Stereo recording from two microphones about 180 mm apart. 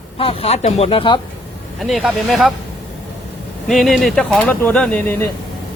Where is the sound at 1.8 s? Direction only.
Centre (ahead or behind).